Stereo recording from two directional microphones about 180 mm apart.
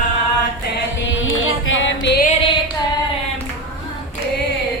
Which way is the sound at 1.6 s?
90° left.